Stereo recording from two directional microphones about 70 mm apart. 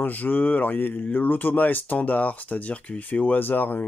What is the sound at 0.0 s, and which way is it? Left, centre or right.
Speech, left.